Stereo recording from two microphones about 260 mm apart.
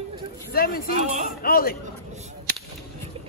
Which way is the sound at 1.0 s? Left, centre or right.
Right.